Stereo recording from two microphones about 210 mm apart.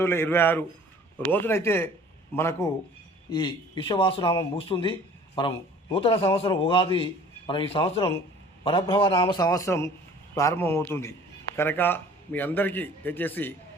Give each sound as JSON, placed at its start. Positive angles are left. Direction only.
{"t": 0.0, "sound": "a man's voice", "side_deg": 10}
{"t": 3.2, "sound": "a man's voice", "side_deg": 25}
{"t": 5.3, "sound": "speech", "side_deg": 15}
{"t": 5.9, "sound": "a man's voice", "side_deg": 25}